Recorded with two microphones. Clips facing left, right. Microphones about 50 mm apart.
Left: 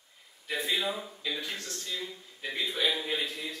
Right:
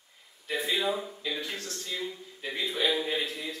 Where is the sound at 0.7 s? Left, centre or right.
Centre.